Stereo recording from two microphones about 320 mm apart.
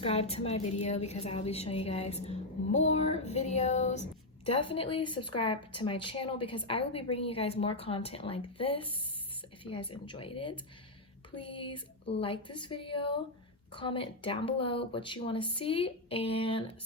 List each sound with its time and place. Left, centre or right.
0.0 s a woman's voice: centre